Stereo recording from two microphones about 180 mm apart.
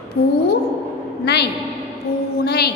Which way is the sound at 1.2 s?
70° left (ahead or behind).